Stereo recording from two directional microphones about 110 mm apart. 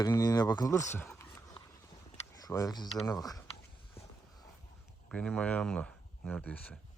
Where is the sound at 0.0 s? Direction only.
35° left (ahead or behind).